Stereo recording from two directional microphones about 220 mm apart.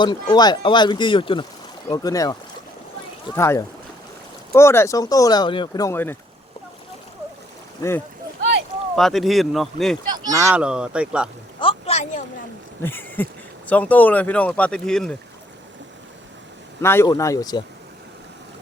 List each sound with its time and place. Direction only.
0.0 s speech: 20° left (ahead or behind)
3.3 s speech: 10° left (ahead or behind)
7.8 s speech: 10° left (ahead or behind)
9.0 s speech: centre (ahead or behind)
10.3 s speech: 10° right (ahead or behind)
11.6 s a sound: 25° left (ahead or behind)
12.8 s speech: 10° left (ahead or behind)
16.8 s speech: 10° left (ahead or behind)